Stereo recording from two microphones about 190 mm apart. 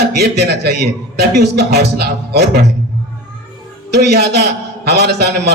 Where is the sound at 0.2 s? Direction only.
55° right (ahead or behind).